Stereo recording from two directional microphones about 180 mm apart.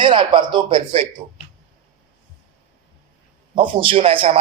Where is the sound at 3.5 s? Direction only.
30° right (ahead or behind).